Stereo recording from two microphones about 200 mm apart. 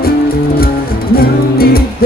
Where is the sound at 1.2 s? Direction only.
50° left (ahead or behind).